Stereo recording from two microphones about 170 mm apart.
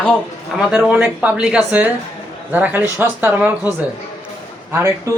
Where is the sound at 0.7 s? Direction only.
5° right (ahead or behind).